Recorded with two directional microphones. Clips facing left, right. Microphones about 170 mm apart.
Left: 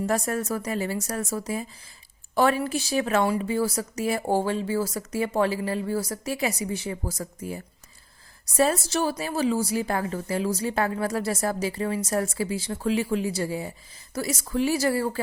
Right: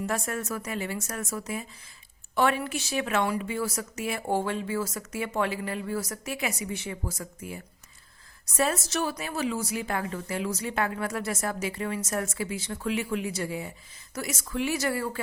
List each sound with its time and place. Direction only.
0.0 s a woman's voice: 40° left (ahead or behind)